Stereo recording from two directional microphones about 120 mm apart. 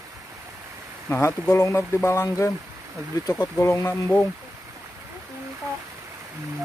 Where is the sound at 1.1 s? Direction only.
20° left (ahead or behind).